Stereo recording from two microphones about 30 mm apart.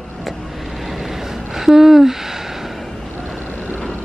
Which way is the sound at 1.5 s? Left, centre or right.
Centre.